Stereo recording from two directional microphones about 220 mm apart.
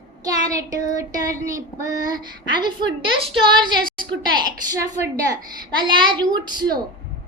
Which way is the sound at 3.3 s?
20° right (ahead or behind).